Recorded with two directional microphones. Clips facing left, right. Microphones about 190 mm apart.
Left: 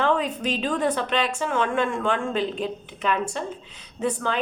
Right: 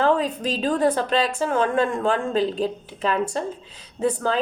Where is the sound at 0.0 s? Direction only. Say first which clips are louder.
Right 3 dB; 35° right (ahead or behind).